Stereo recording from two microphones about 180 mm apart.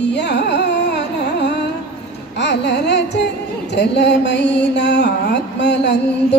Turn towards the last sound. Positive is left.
turn(degrees=70)  # may be behind; listen again after turning